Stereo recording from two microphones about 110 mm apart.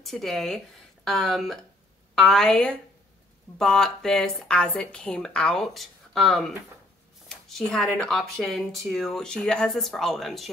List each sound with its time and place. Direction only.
0.0 s speech: centre (ahead or behind)